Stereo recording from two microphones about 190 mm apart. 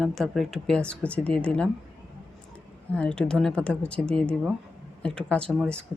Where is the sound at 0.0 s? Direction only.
Centre (ahead or behind).